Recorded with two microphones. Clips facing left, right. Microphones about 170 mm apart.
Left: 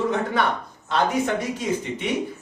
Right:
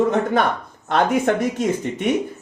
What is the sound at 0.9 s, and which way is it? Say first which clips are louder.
Speech: right 4 dB; 55° right (ahead or behind).